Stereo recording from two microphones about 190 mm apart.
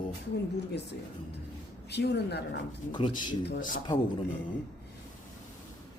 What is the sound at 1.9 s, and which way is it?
Speech, 60° left (ahead or behind).